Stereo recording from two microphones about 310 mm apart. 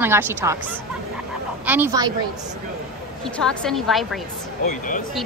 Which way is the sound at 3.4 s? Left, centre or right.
Centre.